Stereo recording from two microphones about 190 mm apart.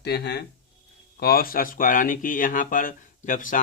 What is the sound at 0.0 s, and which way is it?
Speech, 60° left (ahead or behind).